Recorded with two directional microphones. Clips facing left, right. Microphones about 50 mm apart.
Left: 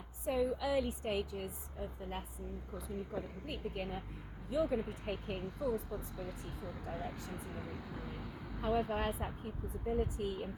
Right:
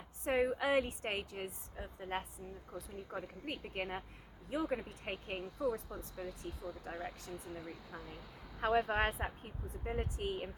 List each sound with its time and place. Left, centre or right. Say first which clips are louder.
0.3 s a woman's voice: right 1 dB; right
5.4 s speech: right 4 dB; left
6.9 s speech: left 1 dB; left
8.6 s a woman's voice: right 2 dB; right
9.8 s speech: left 3 dB; right